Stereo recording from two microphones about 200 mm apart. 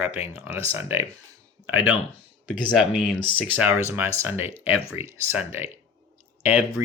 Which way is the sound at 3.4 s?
5° right (ahead or behind).